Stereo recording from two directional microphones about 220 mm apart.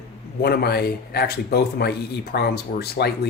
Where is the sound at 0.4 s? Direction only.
45° left (ahead or behind).